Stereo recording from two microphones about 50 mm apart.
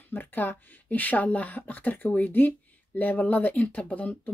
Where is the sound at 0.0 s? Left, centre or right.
Left.